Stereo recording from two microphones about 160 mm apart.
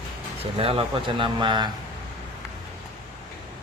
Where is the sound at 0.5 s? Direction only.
35° right (ahead or behind).